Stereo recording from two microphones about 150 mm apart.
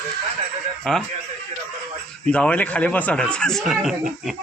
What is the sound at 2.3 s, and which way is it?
A man's voice, 10° left (ahead or behind).